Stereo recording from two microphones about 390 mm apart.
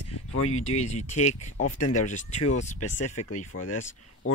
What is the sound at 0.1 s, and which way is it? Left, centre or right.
Speech, left.